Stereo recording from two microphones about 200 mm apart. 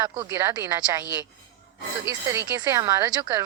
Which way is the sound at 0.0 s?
15° right (ahead or behind).